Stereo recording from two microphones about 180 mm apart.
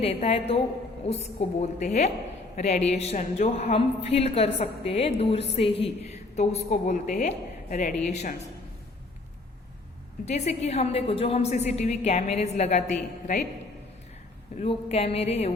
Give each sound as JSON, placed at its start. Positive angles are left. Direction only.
{"t": 0.0, "sound": "a woman's voice", "side_deg": 35}
{"t": 6.1, "sound": "a sound", "side_deg": 35}
{"t": 6.7, "sound": "a woman's voice", "side_deg": 45}
{"t": 10.2, "sound": "a woman's voice", "side_deg": 40}
{"t": 14.6, "sound": "a woman's voice", "side_deg": 35}